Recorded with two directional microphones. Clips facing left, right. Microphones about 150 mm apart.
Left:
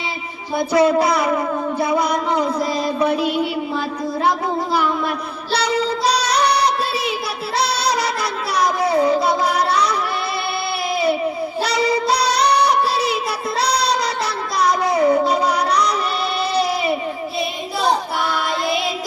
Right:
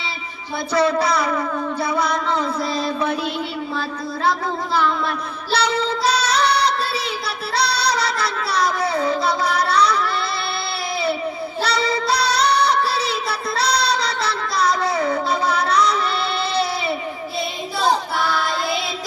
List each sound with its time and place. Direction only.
0.7 s speech: 20° left (ahead or behind)
1.8 s mantra: 20° left (ahead or behind)
5.5 s child singing: 10° left (ahead or behind)
7.6 s music: 20° left (ahead or behind)
11.6 s child singing: 20° left (ahead or behind)
16.6 s a sound: 10° left (ahead or behind)